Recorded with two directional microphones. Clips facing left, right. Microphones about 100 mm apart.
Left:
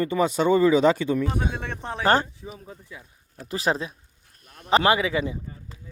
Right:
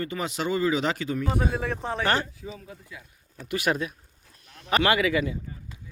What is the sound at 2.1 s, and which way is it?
Speech, 35° left (ahead or behind).